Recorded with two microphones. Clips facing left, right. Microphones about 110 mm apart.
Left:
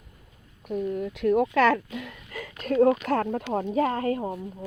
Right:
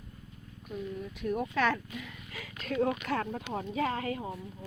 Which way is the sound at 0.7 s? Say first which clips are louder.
Left 10 dB; 60° left (ahead or behind).